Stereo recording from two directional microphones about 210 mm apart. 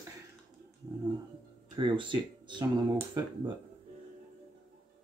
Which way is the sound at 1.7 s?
25° right (ahead or behind).